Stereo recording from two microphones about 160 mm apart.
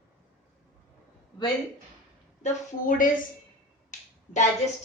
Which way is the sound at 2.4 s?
55° left (ahead or behind).